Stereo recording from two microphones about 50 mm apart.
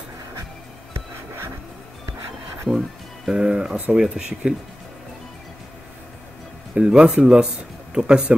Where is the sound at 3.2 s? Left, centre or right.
Centre.